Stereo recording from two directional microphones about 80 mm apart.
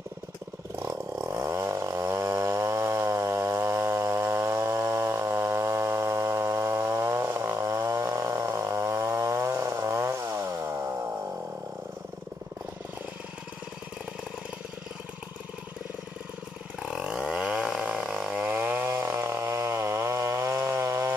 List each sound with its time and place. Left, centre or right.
1.3 s chainsaw: right
1.6 s chainsaw: right
16.8 s a sound: centre
17.8 s chainsaw: centre
18.4 s chainsaw: right